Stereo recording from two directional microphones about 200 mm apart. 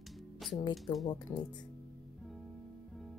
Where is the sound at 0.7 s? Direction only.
Centre (ahead or behind).